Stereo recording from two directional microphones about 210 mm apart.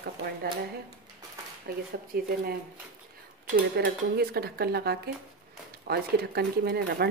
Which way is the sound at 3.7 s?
50° right (ahead or behind).